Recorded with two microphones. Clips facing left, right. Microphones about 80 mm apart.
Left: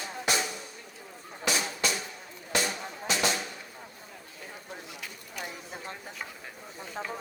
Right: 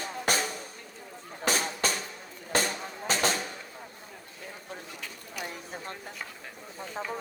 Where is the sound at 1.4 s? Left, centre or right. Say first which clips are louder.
Right 1 dB; right.